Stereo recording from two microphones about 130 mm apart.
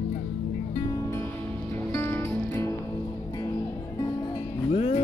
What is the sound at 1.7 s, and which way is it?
Music, 20° left (ahead or behind).